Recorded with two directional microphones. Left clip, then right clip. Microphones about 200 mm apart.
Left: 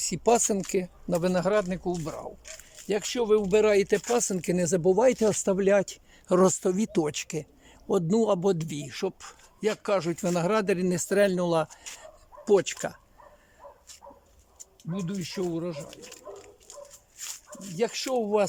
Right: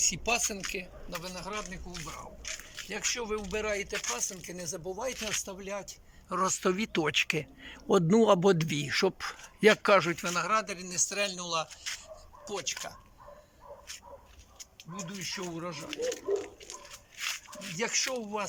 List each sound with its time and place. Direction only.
0.7 s speech: 30° left (ahead or behind)
1.2 s a man's voice: 45° left (ahead or behind); by 10.2 s 20° left (ahead or behind)
10.2 s speech: 40° left (ahead or behind)
14.8 s speech: 50° left (ahead or behind)
16.0 s a sound: 5° left (ahead or behind)
17.2 s speech: 35° left (ahead or behind); by 18.4 s 50° left (ahead or behind)